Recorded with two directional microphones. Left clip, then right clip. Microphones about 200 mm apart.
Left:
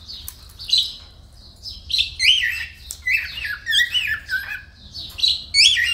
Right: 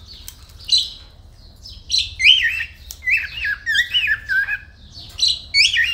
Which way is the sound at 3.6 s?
5° right (ahead or behind).